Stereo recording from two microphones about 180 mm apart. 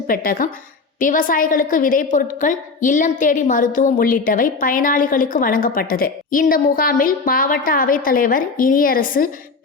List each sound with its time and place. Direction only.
0.1 s a woman's voice: 50° left (ahead or behind)